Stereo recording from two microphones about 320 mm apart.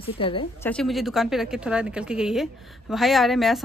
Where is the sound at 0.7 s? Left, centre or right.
Centre.